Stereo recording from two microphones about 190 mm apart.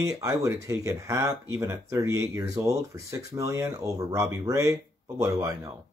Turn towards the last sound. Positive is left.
turn(degrees=-15)  # may be behind; listen again after turning